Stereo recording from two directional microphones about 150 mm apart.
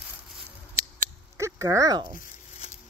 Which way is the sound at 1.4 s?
20° right (ahead or behind).